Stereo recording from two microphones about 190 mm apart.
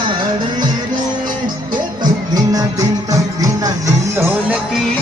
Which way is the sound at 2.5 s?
20° right (ahead or behind).